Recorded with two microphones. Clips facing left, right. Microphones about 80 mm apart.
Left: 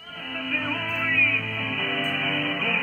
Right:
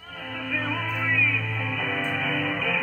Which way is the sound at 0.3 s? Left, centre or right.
Centre.